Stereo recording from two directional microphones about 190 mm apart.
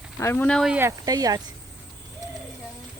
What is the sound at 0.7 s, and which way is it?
Speech, 15° right (ahead or behind).